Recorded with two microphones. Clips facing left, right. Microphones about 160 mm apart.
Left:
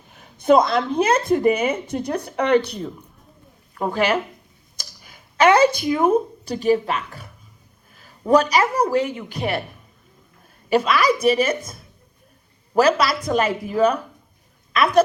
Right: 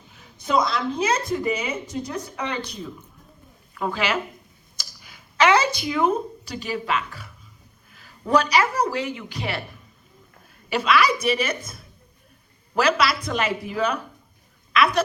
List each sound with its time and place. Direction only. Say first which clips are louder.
0.1 s a woman's voice: left 8 dB; 55° left (ahead or behind)
3.9 s a woman's voice: left 6 dB; 55° left (ahead or behind)
5.4 s a woman's voice: left 4 dB; 50° left (ahead or behind)
8.3 s a woman's voice: left 3 dB; 45° left (ahead or behind)
10.7 s a woman's voice: left 3 dB; 50° left (ahead or behind)